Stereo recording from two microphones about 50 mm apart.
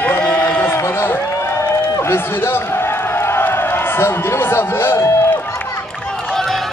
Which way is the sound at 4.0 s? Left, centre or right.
Left.